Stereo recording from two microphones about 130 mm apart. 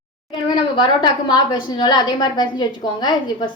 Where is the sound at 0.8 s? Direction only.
35° left (ahead or behind).